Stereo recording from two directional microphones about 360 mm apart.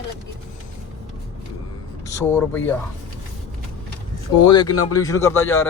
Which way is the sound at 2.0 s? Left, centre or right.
Centre.